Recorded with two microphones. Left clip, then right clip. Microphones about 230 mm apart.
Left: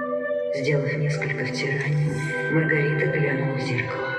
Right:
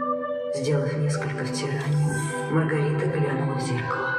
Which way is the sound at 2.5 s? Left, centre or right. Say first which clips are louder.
Left 3 dB; centre.